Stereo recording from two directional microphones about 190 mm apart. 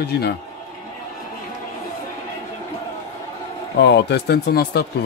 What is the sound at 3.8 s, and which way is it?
A man's voice, 65° left (ahead or behind).